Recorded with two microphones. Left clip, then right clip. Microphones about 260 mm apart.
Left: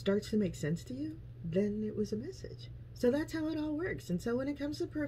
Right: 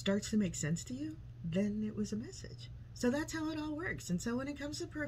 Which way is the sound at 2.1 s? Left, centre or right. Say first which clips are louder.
Left 4 dB; centre.